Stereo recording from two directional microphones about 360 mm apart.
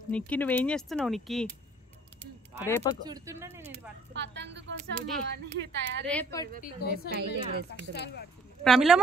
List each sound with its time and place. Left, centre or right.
0.1 s speech: centre
2.6 s speech: centre
3.1 s speech: centre
4.1 s speech: right
6.0 s speech: centre
6.6 s a woman's voice: left
7.2 s speech: right
7.9 s a woman's voice: left
8.6 s speech: centre